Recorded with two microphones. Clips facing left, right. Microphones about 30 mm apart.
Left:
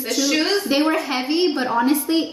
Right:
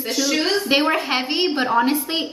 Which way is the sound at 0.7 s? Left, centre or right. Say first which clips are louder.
Right 1 dB; right.